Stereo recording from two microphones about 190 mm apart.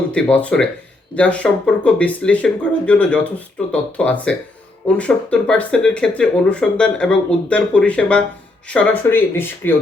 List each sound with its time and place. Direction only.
0.1 s speech: 5° left (ahead or behind)